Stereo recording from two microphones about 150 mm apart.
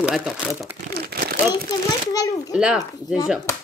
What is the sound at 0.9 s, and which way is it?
Crumpling, 85° right.